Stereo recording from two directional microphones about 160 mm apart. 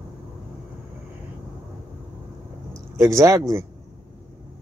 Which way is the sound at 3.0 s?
15° right (ahead or behind).